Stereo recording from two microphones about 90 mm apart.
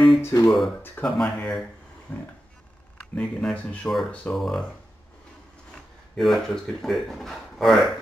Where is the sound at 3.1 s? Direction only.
10° left (ahead or behind).